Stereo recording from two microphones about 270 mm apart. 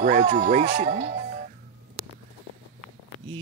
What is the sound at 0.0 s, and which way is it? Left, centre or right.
Speech, right.